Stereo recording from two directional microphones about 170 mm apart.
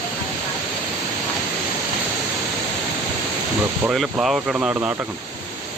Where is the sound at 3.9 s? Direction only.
5° right (ahead or behind).